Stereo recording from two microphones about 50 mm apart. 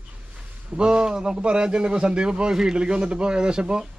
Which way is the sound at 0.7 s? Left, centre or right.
Centre.